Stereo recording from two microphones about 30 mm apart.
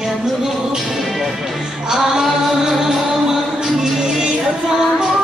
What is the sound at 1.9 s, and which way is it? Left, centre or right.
Music, centre.